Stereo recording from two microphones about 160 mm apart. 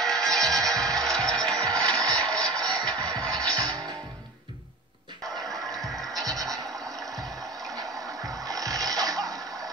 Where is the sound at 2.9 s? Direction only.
25° right (ahead or behind).